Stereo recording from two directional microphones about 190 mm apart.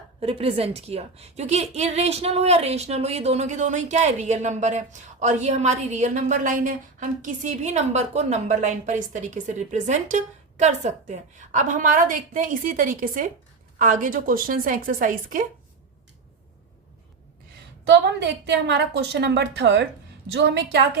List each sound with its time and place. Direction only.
0.2 s a woman's voice: 30° right (ahead or behind)
17.8 s a woman's voice: 65° right (ahead or behind)